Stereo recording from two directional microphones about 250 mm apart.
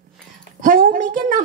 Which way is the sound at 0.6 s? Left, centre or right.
Right.